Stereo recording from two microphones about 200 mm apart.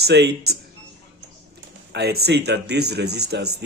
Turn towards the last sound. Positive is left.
turn(degrees=-55)  # may be behind; listen again after turning